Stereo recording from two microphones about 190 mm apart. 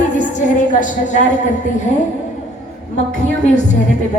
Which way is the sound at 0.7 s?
40° left (ahead or behind).